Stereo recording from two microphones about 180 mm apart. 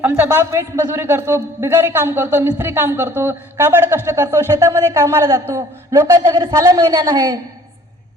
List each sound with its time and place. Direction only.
0.0 s a man's voice: 10° right (ahead or behind)